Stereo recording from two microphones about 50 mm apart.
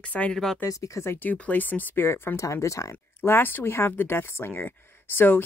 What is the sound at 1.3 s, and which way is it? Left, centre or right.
Speech, left.